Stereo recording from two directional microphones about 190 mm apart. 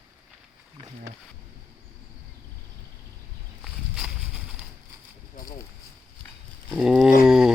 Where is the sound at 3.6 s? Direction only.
5° right (ahead or behind).